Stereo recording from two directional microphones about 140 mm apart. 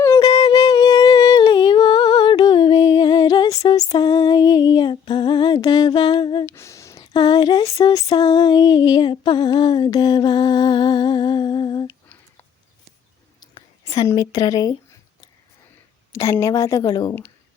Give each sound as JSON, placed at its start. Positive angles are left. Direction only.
{"t": 0.0, "sound": "humming", "side_deg": 25}
{"t": 6.4, "sound": "a sound", "side_deg": 20}
{"t": 7.8, "sound": "female singing", "side_deg": 25}
{"t": 13.4, "sound": "whispering", "side_deg": 30}
{"t": 13.8, "sound": "a woman's voice", "side_deg": 25}
{"t": 16.1, "sound": "a woman's voice", "side_deg": 20}